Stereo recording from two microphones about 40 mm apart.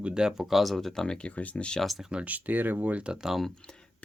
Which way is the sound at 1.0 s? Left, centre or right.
Left.